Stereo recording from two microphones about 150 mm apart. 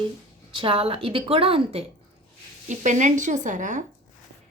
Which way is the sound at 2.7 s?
55° right (ahead or behind).